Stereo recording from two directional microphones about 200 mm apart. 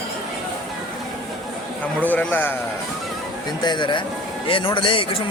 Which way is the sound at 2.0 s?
10° left (ahead or behind).